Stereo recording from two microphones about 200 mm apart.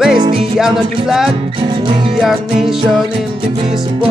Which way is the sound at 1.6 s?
25° right (ahead or behind).